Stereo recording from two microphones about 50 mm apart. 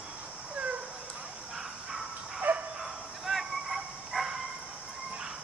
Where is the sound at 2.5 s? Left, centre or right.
Right.